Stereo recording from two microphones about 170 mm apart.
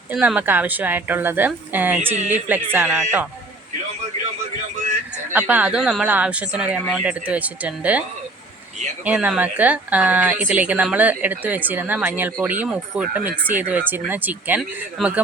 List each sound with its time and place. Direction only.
0.1 s speech: 10° right (ahead or behind)
5.3 s speech: 10° right (ahead or behind)
9.0 s speech: 5° right (ahead or behind)